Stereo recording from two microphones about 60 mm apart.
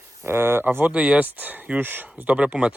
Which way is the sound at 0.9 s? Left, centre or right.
Right.